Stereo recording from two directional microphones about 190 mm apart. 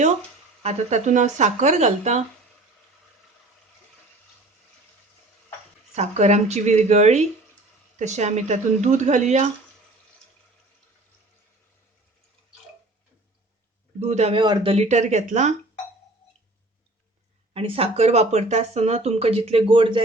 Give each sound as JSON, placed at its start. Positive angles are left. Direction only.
{"t": 0.6, "sound": "speech", "side_deg": -35}
{"t": 5.9, "sound": "speech", "side_deg": -35}
{"t": 14.0, "sound": "speech", "side_deg": -35}
{"t": 17.5, "sound": "speech", "side_deg": -30}